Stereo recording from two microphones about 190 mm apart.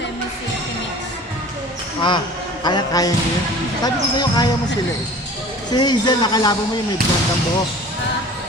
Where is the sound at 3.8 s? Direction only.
20° left (ahead or behind).